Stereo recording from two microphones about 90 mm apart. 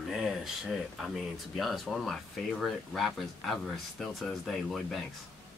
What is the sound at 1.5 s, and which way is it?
Speech, centre (ahead or behind).